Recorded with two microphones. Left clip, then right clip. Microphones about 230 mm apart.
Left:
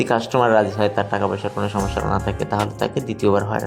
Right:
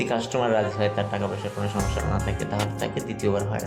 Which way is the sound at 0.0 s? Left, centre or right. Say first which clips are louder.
Left 7 dB; left.